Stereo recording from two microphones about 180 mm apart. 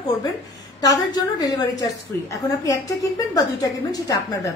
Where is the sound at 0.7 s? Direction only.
20° left (ahead or behind).